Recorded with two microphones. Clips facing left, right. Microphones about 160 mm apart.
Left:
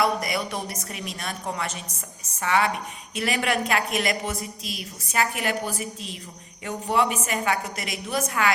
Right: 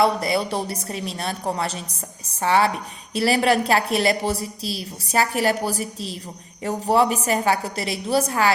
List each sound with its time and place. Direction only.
0.0 s a woman's voice: 30° right (ahead or behind)